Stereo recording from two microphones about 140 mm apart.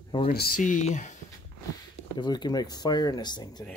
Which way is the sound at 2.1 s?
30° left (ahead or behind).